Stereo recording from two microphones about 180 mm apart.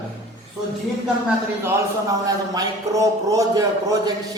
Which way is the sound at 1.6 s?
20° right (ahead or behind).